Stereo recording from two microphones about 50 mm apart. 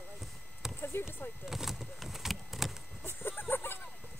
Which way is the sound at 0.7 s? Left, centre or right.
Left.